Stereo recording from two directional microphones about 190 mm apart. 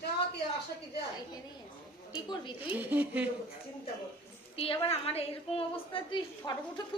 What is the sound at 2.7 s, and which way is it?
Speech, 10° right (ahead or behind).